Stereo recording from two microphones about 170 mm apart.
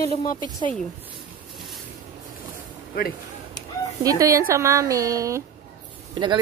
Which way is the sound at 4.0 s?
20° right (ahead or behind).